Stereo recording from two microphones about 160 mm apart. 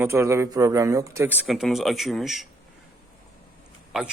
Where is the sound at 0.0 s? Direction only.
15° right (ahead or behind).